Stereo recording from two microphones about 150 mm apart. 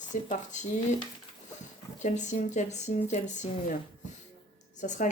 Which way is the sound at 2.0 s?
55° left (ahead or behind).